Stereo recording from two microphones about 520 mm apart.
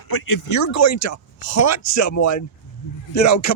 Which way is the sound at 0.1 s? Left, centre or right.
Left.